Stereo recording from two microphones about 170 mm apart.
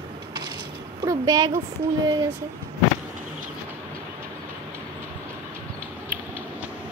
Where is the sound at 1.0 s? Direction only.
20° right (ahead or behind).